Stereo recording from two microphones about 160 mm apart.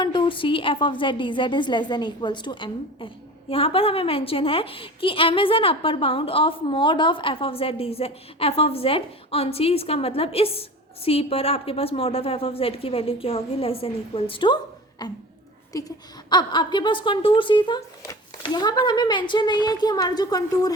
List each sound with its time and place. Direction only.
0.0 s a woman's voice: 30° left (ahead or behind)